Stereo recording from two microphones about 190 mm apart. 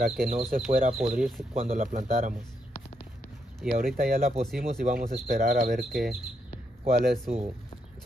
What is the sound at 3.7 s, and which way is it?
Speech, 50° right (ahead or behind).